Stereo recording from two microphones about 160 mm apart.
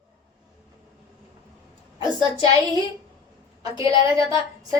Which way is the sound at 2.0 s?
25° right (ahead or behind).